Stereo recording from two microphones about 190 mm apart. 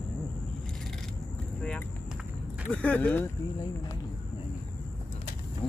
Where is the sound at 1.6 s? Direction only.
5° left (ahead or behind).